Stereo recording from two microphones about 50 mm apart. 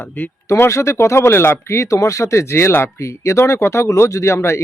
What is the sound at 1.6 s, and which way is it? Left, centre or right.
Speech, left.